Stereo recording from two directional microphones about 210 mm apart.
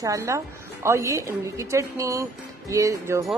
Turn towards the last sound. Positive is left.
turn(degrees=-15)  # may be behind; listen again after turning